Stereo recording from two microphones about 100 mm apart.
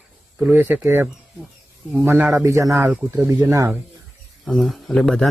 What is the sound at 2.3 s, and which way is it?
Speech, 30° right (ahead or behind).